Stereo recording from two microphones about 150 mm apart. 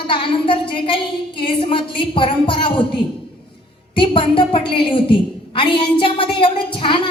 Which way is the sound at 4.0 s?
35° left (ahead or behind).